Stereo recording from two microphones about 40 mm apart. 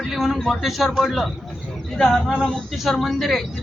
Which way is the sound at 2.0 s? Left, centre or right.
Centre.